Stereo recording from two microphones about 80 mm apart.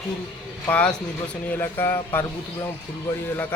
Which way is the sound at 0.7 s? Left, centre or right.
Centre.